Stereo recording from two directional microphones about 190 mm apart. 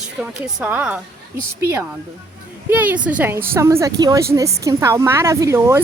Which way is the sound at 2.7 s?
10° right (ahead or behind).